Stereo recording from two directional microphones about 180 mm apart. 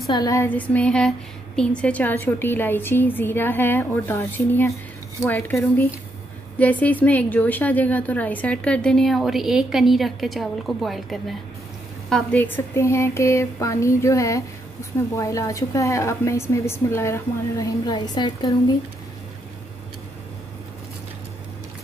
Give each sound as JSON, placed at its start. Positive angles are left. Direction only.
{"t": 0.0, "sound": "speech", "side_deg": 20}